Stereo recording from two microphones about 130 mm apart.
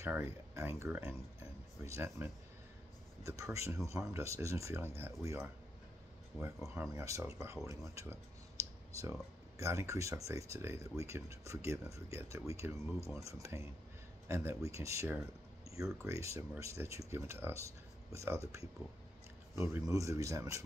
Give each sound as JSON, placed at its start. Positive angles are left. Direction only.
{"t": 0.0, "sound": "speech", "side_deg": -20}
{"t": 6.7, "sound": "speech", "side_deg": -20}
{"t": 7.6, "sound": "a sound", "side_deg": -25}
{"t": 9.6, "sound": "speech", "side_deg": -20}